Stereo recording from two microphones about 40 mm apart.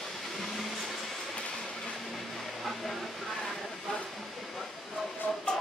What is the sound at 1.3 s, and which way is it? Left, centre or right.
Train, left.